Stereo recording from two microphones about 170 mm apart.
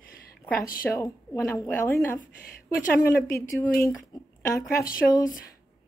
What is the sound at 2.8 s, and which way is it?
Speech, 60° left (ahead or behind).